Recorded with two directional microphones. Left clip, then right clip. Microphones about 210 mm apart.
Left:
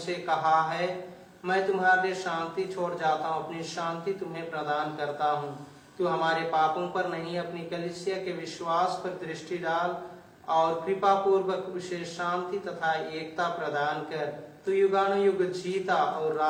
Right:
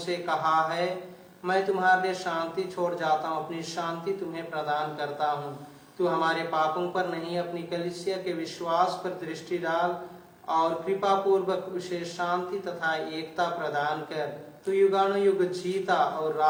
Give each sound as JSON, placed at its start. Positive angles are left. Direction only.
{"t": 0.1, "sound": "a man's voice", "side_deg": -50}
{"t": 10.5, "sound": "a man's voice", "side_deg": -50}